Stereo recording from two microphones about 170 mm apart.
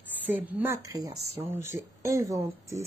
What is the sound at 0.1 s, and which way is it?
Speech, 10° right (ahead or behind).